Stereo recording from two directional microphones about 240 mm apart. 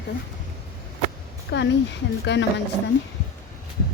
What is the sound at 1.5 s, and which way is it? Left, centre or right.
Speech, left.